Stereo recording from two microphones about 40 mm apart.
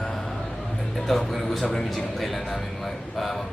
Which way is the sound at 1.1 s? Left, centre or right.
Centre.